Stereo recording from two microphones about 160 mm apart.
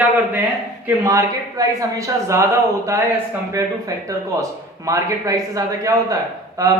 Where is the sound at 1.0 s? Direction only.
20° right (ahead or behind).